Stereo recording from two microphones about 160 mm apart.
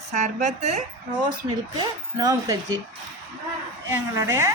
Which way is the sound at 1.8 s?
20° right (ahead or behind).